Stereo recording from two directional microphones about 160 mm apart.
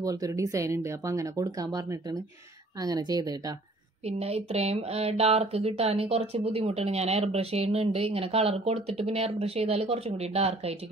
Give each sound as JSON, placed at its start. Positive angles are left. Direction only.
{"t": 0.0, "sound": "speech", "side_deg": -20}
{"t": 4.0, "sound": "speech", "side_deg": -40}